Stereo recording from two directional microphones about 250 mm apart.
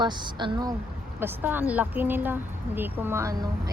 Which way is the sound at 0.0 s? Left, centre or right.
Centre.